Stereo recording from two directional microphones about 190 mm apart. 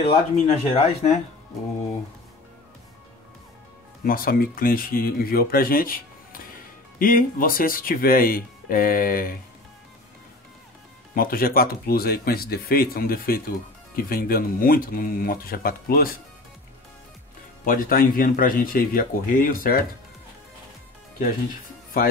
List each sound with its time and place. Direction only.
0.0 s speech: 35° left (ahead or behind)
4.0 s speech: 50° left (ahead or behind)
11.1 s speech: 50° left (ahead or behind)
17.6 s speech: 45° left (ahead or behind)